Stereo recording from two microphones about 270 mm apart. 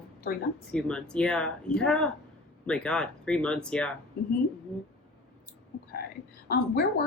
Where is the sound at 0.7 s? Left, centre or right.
Centre.